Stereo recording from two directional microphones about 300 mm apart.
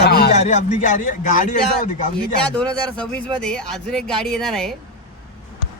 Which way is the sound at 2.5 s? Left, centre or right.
Centre.